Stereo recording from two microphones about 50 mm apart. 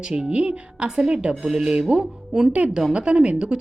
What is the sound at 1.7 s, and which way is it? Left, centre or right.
A woman's voice, centre.